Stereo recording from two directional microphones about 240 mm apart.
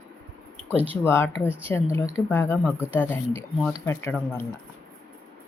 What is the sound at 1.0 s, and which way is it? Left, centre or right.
Speech, centre.